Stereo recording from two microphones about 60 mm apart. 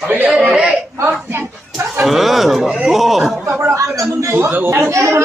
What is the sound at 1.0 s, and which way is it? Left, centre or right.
Speech, right.